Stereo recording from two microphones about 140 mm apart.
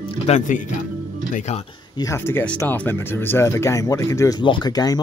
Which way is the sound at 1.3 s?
55° left (ahead or behind).